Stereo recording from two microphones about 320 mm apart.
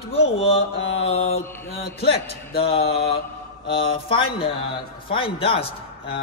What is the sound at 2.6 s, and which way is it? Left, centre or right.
Mantra, centre.